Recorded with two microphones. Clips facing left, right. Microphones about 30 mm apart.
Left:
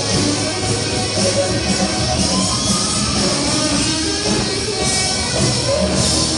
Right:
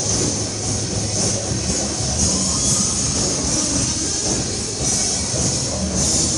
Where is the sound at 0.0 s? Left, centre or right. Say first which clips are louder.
Left 5 dB; left.